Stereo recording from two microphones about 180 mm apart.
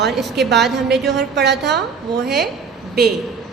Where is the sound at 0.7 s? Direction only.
70° right (ahead or behind).